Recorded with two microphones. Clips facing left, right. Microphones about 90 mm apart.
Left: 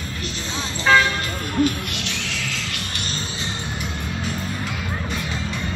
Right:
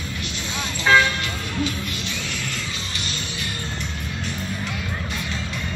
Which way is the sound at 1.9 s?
75° left (ahead or behind).